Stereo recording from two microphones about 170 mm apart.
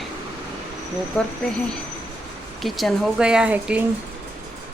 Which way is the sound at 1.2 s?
Centre (ahead or behind).